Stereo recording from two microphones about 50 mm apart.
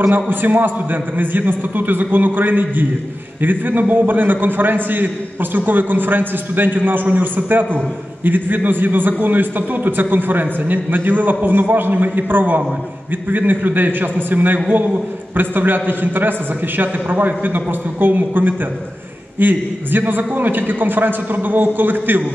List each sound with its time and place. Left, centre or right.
0.1 s a man's voice: right